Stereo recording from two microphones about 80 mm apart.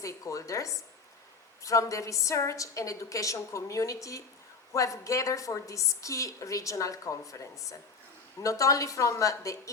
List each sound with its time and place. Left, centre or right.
0.0 s a woman's voice: left